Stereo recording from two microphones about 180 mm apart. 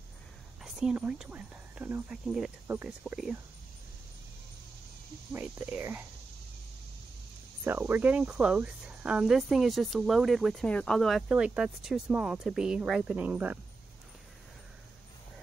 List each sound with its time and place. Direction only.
0.7 s speech: 5° right (ahead or behind)
5.3 s speech: 10° right (ahead or behind)
7.6 s speech: 10° right (ahead or behind)